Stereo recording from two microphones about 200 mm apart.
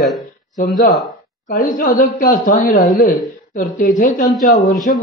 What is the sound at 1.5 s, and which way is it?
Speech, 45° left (ahead or behind).